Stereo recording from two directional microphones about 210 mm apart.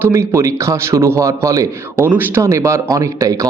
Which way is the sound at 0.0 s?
10° right (ahead or behind).